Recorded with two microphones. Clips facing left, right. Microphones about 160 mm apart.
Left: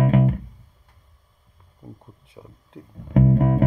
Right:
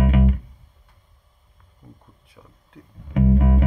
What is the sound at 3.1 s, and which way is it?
Music, 40° left (ahead or behind).